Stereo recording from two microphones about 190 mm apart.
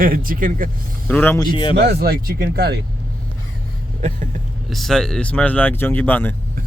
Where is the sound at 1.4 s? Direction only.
25° left (ahead or behind).